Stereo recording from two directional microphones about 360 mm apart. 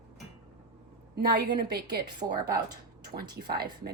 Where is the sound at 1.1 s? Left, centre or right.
Right.